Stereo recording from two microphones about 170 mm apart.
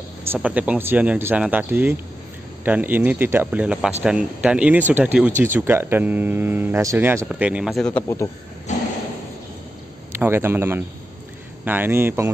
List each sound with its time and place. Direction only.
0.3 s speech: 10° right (ahead or behind)
8.7 s a sound: 45° left (ahead or behind)
10.1 s speech: 15° right (ahead or behind)